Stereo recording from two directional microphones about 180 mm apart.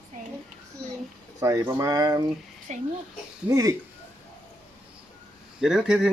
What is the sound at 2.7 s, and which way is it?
Speech, 40° right (ahead or behind).